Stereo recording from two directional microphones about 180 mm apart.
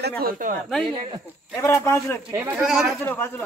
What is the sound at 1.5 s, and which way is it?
Speech, 15° left (ahead or behind).